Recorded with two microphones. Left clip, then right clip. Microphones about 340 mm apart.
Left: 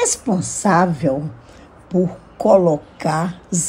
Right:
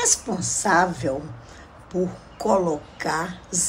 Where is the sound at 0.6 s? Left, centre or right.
Left.